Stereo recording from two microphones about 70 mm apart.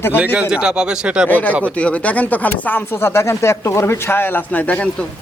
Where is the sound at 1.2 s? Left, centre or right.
Left.